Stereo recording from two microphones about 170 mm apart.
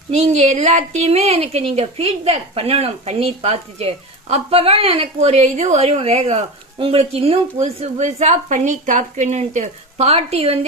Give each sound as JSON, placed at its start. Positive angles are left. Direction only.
{"t": 0.1, "sound": "a woman's voice", "side_deg": -40}